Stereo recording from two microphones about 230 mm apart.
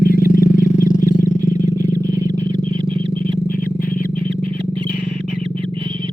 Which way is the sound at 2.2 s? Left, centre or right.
Left.